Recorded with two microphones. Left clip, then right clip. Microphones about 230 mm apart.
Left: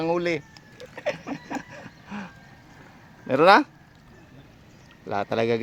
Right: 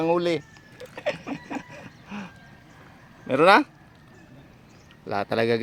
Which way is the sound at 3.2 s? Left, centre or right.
Centre.